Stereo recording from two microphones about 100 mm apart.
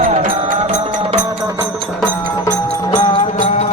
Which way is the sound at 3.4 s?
90° left.